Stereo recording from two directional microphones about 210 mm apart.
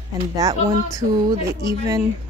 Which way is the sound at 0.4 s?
15° right (ahead or behind).